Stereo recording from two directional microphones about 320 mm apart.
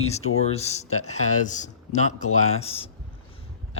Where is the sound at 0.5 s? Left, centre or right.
Centre.